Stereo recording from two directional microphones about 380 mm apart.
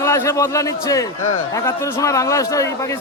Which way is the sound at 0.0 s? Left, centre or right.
Centre.